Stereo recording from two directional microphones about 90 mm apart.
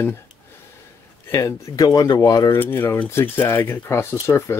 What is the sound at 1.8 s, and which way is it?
Speech, 50° left (ahead or behind).